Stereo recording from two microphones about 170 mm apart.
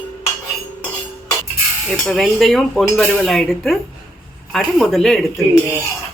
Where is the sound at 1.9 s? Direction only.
Centre (ahead or behind).